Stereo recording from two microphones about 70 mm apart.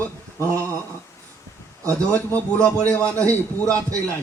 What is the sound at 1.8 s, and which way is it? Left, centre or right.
Speech, right.